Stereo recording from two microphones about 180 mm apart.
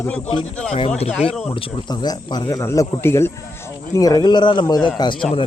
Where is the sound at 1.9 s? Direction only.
20° left (ahead or behind).